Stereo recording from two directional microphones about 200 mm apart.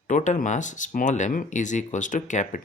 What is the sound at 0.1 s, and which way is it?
Speech, 40° left (ahead or behind).